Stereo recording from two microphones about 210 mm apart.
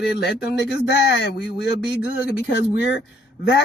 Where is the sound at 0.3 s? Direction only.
55° left (ahead or behind).